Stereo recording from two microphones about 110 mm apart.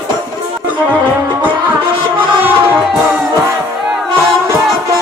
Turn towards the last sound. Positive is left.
turn(degrees=-15)  # may be behind; listen again after turning